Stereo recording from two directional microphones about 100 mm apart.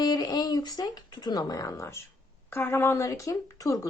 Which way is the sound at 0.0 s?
40° left (ahead or behind).